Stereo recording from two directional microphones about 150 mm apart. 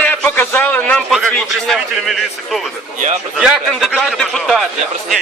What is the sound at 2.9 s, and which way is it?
Speech, 50° right (ahead or behind).